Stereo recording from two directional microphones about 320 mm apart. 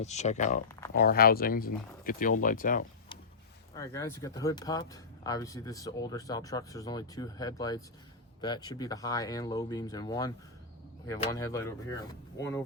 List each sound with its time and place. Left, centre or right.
0.0 s speech: left
3.8 s speech: centre